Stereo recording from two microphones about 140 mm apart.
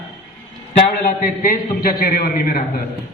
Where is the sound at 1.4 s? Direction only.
85° left.